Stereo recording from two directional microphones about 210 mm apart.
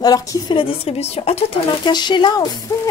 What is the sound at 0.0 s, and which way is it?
Speech, 20° left (ahead or behind).